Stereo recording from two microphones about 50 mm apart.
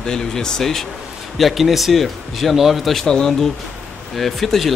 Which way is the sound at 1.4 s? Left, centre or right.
Centre.